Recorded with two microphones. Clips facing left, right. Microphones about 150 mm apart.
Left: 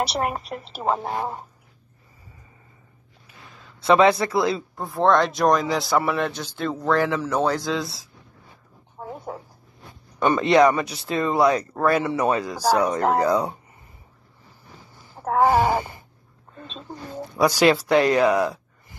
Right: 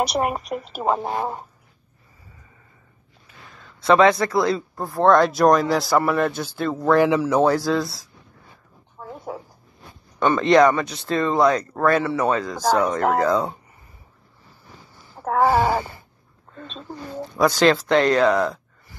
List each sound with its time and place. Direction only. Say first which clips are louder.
0.0 s speech: right 3 dB; 15° right (ahead or behind)
3.5 s a sound: right 1 dB; 5° left (ahead or behind)
4.0 s speech: right 1 dB; 30° left (ahead or behind)
4.4 s speech: right 2 dB; centre (ahead or behind)
7.0 s speech: right 5 dB; 10° right (ahead or behind)
9.3 s zipper: right 5 dB; 10° right (ahead or behind)
10.1 s speech: right 1 dB; 10° left (ahead or behind)
15.4 s speech: even; 15° left (ahead or behind)